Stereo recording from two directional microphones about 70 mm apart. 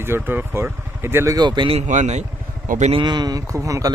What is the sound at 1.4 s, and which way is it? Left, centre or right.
Speech, right.